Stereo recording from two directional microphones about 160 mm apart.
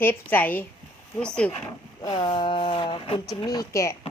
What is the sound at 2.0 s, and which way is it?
Speech, 25° left (ahead or behind).